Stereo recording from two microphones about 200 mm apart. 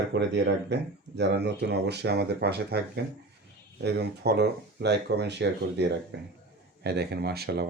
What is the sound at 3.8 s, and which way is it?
Speech, 55° right (ahead or behind).